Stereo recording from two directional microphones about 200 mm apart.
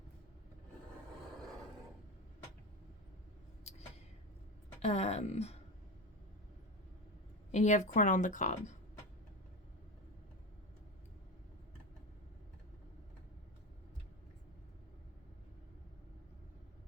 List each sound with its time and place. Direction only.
3.6 s vehicle: 35° left (ahead or behind)
4.8 s speech: 30° left (ahead or behind)
7.5 s speech: 35° left (ahead or behind)